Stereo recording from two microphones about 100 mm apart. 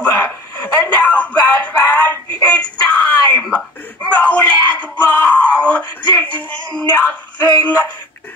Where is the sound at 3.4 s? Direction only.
10° left (ahead or behind).